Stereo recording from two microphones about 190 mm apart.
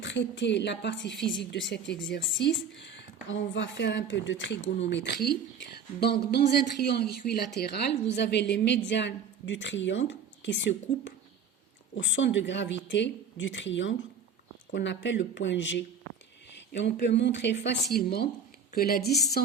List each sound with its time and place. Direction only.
0.0 s speech: 70° left (ahead or behind)
4.9 s a woman's voice: 65° left (ahead or behind)
17.9 s a woman's voice: 55° left (ahead or behind)